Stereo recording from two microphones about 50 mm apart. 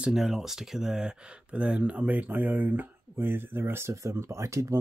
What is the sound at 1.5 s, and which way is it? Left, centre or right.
Speech, right.